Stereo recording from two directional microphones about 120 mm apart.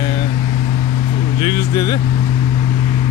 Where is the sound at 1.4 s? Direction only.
40° left (ahead or behind).